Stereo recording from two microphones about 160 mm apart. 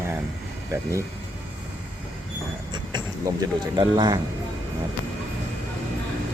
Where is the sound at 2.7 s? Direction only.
25° right (ahead or behind).